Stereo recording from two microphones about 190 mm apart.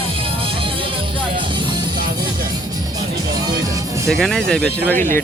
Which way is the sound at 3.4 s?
20° right (ahead or behind).